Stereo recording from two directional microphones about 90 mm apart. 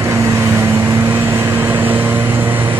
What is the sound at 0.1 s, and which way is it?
Vehicle, 35° right (ahead or behind).